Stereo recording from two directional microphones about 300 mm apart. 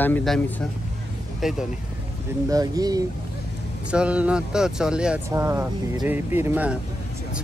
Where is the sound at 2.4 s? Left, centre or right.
Centre.